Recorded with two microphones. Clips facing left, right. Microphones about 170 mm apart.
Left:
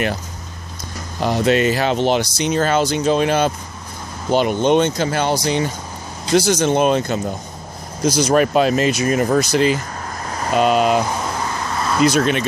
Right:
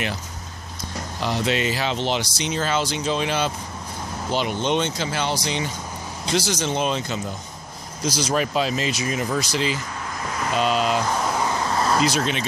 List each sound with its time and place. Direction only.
1.2 s speech: 50° left (ahead or behind)
11.4 s a sound: 25° right (ahead or behind)
12.0 s speech: 55° left (ahead or behind)